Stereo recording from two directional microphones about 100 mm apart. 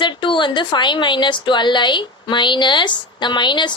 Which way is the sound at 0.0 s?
55° left (ahead or behind).